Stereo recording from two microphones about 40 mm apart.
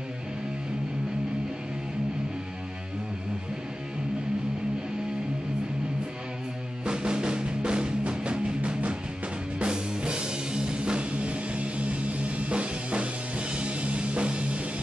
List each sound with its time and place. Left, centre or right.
6.8 s music: right